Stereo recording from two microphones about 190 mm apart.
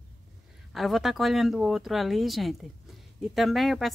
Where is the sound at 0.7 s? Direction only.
Centre (ahead or behind).